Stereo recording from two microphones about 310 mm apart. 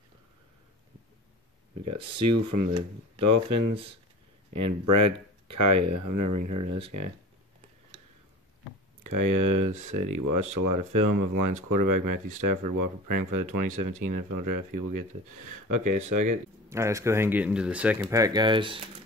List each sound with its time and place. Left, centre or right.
2.0 s speech: centre
2.2 s speech: right
3.7 s speech: centre
4.6 s speech: right
9.0 s speech: right
9.7 s speech: right
9.9 s speech: right
16.6 s speech: centre